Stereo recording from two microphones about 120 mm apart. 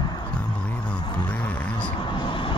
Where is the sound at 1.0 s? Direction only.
35° left (ahead or behind).